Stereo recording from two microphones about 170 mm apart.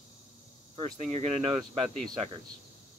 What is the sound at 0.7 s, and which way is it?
Speech, 35° right (ahead or behind).